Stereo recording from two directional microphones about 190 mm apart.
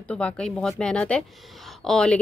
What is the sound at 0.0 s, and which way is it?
Speech, 5° left (ahead or behind).